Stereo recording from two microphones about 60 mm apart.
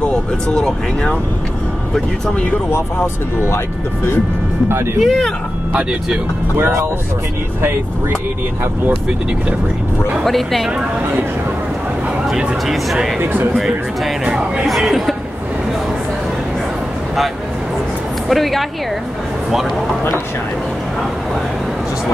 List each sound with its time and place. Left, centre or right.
0.0 s speech: centre
3.4 s speech: left
5.0 s speech: centre
6.5 s speech: right
10.2 s speech: centre
12.6 s speech: centre
13.2 s speech: right
13.6 s speech: centre
18.3 s speech: centre